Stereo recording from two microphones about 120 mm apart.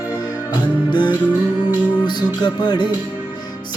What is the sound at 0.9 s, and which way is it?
Music, 40° left (ahead or behind).